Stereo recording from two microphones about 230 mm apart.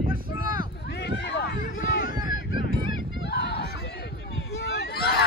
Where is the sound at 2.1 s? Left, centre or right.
Centre.